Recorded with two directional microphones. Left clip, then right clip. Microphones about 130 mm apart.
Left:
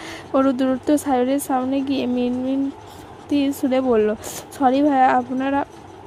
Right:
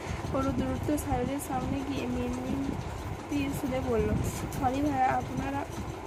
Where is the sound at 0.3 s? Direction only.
90° left.